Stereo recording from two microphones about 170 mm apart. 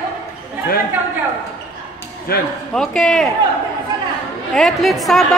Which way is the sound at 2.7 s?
5° left (ahead or behind).